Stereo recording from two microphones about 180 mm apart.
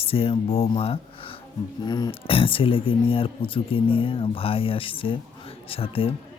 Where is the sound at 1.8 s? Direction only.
20° left (ahead or behind).